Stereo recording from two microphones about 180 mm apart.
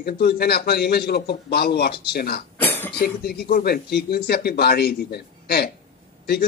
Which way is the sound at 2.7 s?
10° left (ahead or behind).